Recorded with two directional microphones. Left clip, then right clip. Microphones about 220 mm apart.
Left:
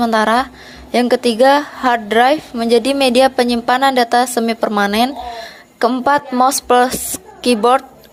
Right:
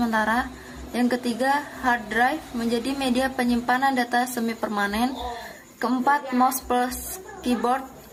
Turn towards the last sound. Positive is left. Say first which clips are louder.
# left 12 dB
turn(degrees=40)  # may be behind; listen again after turning